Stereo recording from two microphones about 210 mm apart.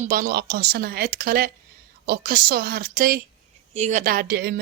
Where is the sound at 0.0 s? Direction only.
40° right (ahead or behind).